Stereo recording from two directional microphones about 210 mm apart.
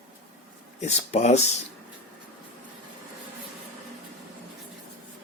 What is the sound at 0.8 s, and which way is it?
Speech, 35° left (ahead or behind).